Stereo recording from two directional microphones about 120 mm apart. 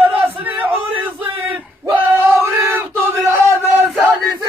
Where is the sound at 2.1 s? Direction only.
20° right (ahead or behind).